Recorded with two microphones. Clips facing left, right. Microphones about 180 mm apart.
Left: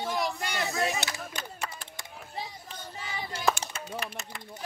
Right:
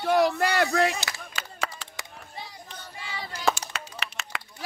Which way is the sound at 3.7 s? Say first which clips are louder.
Left 2 dB; 75° right (ahead or behind).